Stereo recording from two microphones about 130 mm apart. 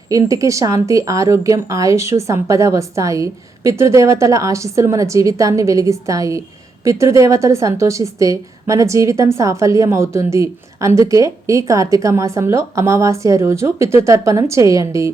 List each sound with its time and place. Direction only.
0.1 s a woman's voice: 25° right (ahead or behind)